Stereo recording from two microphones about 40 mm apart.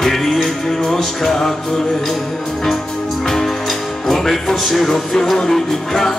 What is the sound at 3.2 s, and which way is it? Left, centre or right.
Music, centre.